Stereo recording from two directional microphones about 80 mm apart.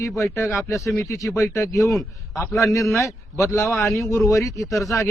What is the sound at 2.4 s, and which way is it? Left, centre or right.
A man's voice, left.